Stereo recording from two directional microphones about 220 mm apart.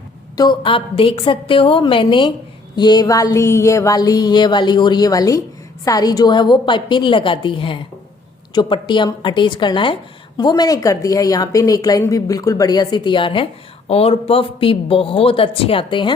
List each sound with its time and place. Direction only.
0.3 s a woman's voice: 20° left (ahead or behind)
2.7 s a sound: 20° left (ahead or behind)
5.8 s a woman's voice: 15° left (ahead or behind)